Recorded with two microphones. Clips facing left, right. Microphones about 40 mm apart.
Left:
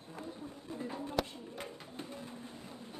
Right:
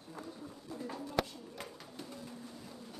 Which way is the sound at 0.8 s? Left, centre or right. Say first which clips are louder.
Even; left.